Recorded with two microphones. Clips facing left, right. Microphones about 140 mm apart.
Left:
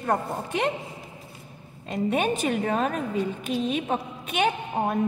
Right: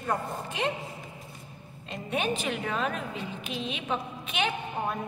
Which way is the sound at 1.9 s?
45° left (ahead or behind).